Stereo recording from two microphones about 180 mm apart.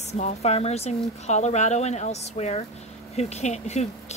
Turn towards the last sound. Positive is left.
turn(degrees=40)  # may be behind; listen again after turning